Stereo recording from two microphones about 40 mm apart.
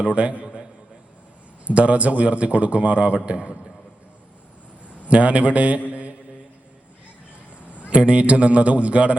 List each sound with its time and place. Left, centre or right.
0.0 s a man's voice: right
1.6 s a man's voice: right
5.0 s a man's voice: right
5.9 s mantra: right
7.6 s a man's voice: right